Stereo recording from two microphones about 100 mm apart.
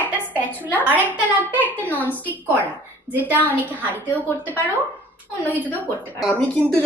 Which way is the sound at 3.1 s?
20° right (ahead or behind).